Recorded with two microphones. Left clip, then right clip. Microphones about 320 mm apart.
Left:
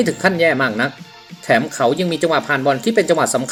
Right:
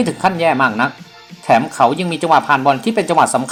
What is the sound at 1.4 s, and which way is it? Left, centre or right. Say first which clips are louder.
Speech: right 3 dB; right.